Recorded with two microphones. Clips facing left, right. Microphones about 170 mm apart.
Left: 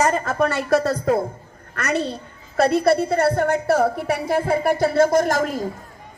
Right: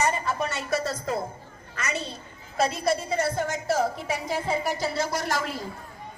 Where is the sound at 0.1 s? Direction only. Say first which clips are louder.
Left 8 dB; 50° left (ahead or behind).